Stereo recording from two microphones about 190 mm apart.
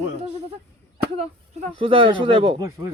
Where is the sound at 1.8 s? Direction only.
25° right (ahead or behind).